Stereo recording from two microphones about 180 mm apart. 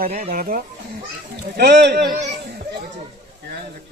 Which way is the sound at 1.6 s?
65° right (ahead or behind).